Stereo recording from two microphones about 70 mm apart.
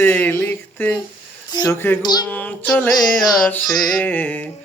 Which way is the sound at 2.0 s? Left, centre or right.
Left.